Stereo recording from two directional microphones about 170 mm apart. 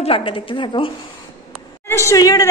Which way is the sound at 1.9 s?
15° left (ahead or behind).